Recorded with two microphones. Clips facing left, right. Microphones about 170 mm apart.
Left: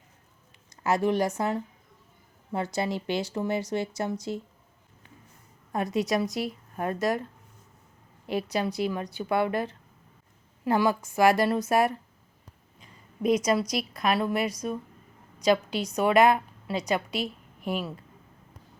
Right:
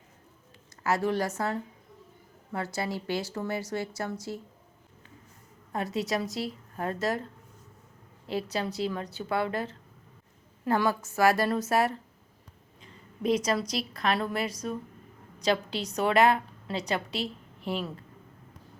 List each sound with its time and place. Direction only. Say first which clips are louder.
0.9 s a woman's voice: left 3 dB; 20° left (ahead or behind)
2.7 s speech: left 3 dB; 20° left (ahead or behind)
5.7 s a woman's voice: left 4 dB; 15° left (ahead or behind)
8.3 s a woman's voice: left 3 dB; 15° left (ahead or behind)
13.4 s a woman's voice: left 3 dB; 15° left (ahead or behind)